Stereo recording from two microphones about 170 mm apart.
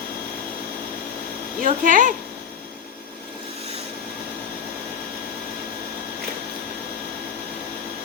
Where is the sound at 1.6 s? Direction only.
50° right (ahead or behind).